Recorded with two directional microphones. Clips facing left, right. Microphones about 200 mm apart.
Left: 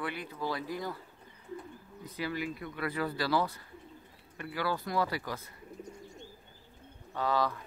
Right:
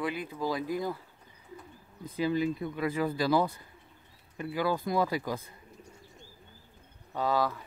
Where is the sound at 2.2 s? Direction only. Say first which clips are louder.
Right 8 dB; 20° right (ahead or behind).